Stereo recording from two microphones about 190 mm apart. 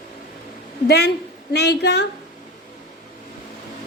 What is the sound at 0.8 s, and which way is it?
A woman's voice, 60° left (ahead or behind).